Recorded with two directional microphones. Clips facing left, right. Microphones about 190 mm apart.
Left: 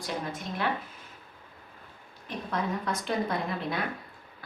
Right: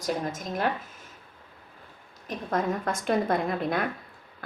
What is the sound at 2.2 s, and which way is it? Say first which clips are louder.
A woman's voice: right 4 dB; 45° right (ahead or behind).